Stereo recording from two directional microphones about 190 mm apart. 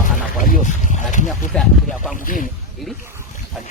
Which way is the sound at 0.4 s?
45° left (ahead or behind).